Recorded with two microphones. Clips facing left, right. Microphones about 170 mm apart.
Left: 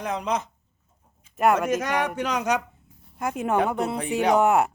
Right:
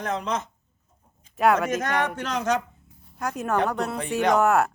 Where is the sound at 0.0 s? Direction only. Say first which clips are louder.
Left 1 dB; 10° left (ahead or behind).